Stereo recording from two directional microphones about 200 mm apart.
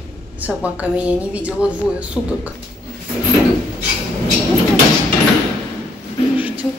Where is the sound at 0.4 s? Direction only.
5° right (ahead or behind).